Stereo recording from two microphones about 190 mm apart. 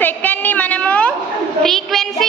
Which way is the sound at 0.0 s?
10° left (ahead or behind).